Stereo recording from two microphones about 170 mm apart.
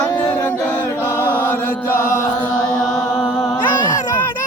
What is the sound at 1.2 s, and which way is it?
Chant, 10° left (ahead or behind).